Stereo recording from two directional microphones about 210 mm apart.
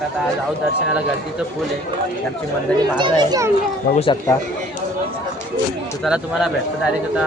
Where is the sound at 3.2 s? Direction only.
20° right (ahead or behind).